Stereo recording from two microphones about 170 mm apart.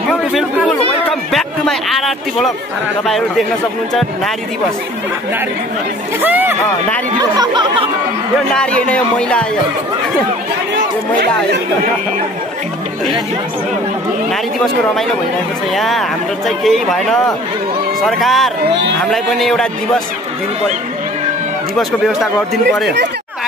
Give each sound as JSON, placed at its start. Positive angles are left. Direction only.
{"t": 0.1, "sound": "a sound", "side_deg": 0}
{"t": 3.1, "sound": "speech", "side_deg": 0}
{"t": 6.2, "sound": "speech", "side_deg": -10}
{"t": 7.2, "sound": "speech", "side_deg": -25}
{"t": 8.5, "sound": "speech", "side_deg": 5}
{"t": 15.7, "sound": "speech", "side_deg": 0}
{"t": 18.7, "sound": "speech", "side_deg": -90}
{"t": 19.0, "sound": "speech", "side_deg": 0}
{"t": 21.7, "sound": "speech", "side_deg": 0}